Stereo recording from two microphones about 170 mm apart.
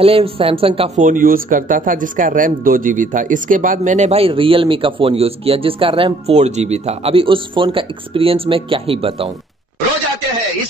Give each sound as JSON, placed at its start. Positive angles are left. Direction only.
{"t": 0.0, "sound": "speech", "side_deg": -35}
{"t": 0.9, "sound": "speech", "side_deg": -50}